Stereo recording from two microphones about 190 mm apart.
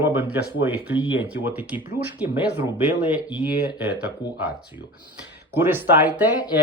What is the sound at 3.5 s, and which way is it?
Speech, 55° left (ahead or behind).